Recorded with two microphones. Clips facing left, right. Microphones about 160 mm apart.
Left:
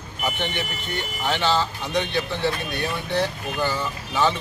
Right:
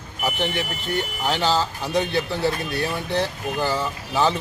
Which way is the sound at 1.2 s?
40° right (ahead or behind).